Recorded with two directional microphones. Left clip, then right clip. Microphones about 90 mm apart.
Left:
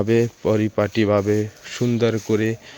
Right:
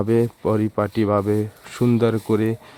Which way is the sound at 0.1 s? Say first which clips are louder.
Left 1 dB; 20° right (ahead or behind).